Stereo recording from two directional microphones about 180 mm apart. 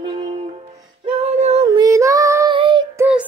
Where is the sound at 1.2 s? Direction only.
40° right (ahead or behind).